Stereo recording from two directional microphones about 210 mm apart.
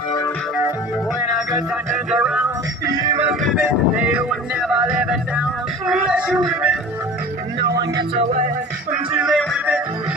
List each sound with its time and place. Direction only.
1.9 s music: 5° right (ahead or behind)
3.0 s music: 20° right (ahead or behind)
3.3 s vehicle: 5° right (ahead or behind)
5.9 s a sound: 5° right (ahead or behind)
9.1 s music: centre (ahead or behind)